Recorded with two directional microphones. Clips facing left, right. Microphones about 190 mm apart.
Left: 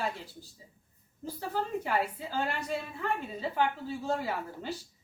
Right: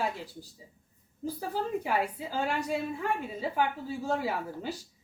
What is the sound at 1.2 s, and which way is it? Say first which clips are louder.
A woman's voice: right 2 dB; 10° right (ahead or behind).